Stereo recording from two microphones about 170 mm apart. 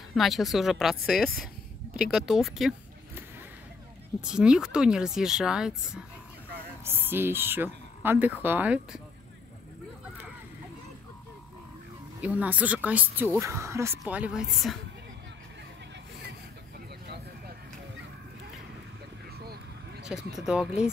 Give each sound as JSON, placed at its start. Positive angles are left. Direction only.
{"t": 0.1, "sound": "speech", "side_deg": 0}
{"t": 4.2, "sound": "speech", "side_deg": -5}
{"t": 6.8, "sound": "speech", "side_deg": -15}
{"t": 12.2, "sound": "speech", "side_deg": -10}
{"t": 19.3, "sound": "vehicle", "side_deg": -65}
{"t": 20.3, "sound": "speech", "side_deg": -5}